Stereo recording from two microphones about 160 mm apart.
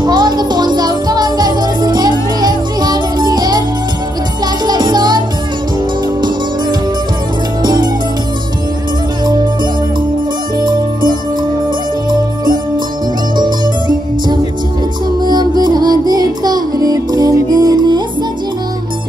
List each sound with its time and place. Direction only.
0.0 s music: 25° right (ahead or behind)
4.6 s music: 25° right (ahead or behind)
7.6 s music: 25° right (ahead or behind)
10.6 s music: 25° right (ahead or behind)
13.4 s music: 25° right (ahead or behind)